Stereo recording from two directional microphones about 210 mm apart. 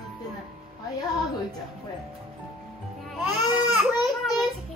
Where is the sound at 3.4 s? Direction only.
20° left (ahead or behind).